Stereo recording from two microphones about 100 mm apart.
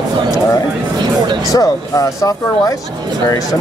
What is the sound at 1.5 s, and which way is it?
Speech, 35° left (ahead or behind).